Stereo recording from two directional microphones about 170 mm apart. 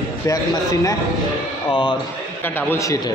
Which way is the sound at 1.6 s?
30° left (ahead or behind).